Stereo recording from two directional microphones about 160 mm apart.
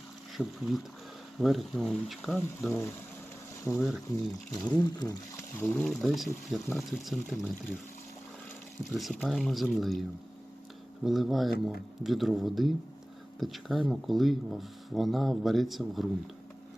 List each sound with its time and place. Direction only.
0.3 s speech: centre (ahead or behind)
2.6 s speech: 15° left (ahead or behind)
5.5 s speech: 10° left (ahead or behind)
5.9 s speech: centre (ahead or behind)
9.0 s speech: centre (ahead or behind)